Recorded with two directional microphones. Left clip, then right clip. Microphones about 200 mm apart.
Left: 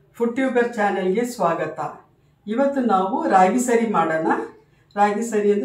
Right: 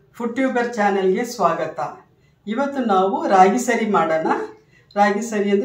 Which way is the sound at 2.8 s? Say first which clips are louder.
Right 2 dB; 30° right (ahead or behind).